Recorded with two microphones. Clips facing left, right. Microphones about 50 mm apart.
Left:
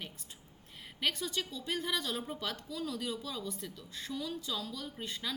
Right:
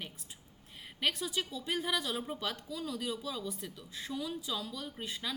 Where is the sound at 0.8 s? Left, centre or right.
Centre.